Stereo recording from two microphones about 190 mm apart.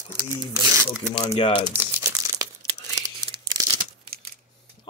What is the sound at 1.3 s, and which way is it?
Speech, 25° left (ahead or behind).